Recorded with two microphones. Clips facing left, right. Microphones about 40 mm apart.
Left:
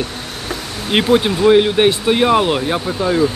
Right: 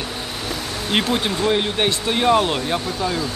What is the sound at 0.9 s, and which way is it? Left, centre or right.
Speech, centre.